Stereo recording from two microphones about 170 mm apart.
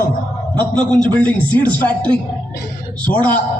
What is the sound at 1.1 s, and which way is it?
A woman's voice, 10° left (ahead or behind).